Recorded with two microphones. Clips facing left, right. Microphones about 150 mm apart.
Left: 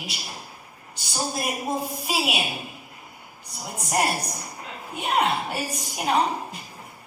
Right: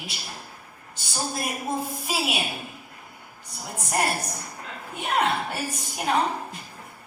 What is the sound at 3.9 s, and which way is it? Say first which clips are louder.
A woman's voice: left 2 dB; 15° left (ahead or behind).